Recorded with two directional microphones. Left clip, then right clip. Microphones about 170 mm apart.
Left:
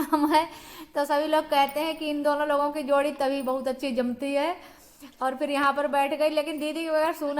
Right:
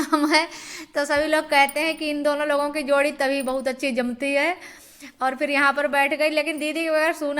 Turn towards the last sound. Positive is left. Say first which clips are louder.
# right 4 dB
turn(degrees=-10)  # may be behind; listen again after turning